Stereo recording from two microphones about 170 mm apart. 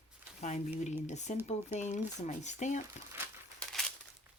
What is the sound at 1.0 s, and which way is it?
Speech, 45° left (ahead or behind).